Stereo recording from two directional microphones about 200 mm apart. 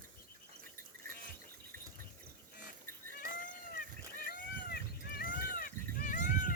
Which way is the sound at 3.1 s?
40° left (ahead or behind).